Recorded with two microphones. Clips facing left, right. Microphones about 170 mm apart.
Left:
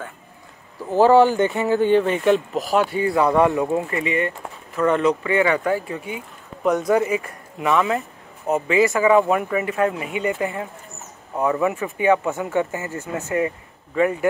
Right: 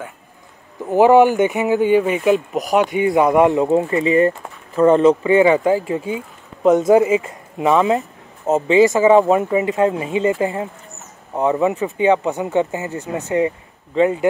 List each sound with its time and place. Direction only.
0.8 s speech: 15° right (ahead or behind)